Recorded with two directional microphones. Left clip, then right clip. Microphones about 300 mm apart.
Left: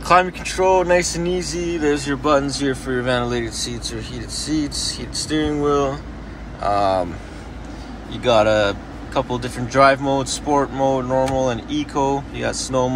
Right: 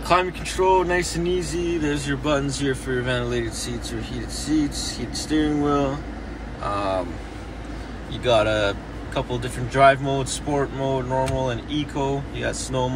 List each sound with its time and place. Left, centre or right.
0.0 s speech: centre
6.6 s speech: centre
8.2 s speech: centre